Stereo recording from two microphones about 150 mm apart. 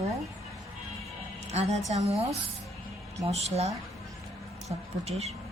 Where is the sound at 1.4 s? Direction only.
45° right (ahead or behind).